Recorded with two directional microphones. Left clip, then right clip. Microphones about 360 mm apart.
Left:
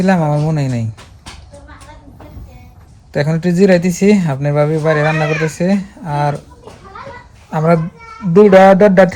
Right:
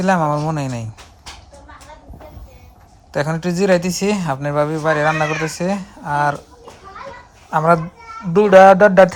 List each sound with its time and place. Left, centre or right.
0.0 s speech: centre
3.1 s speech: centre
5.1 s speech: centre
5.5 s speech: centre
7.5 s speech: centre